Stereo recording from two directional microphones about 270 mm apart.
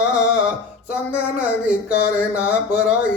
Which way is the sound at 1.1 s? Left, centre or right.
Centre.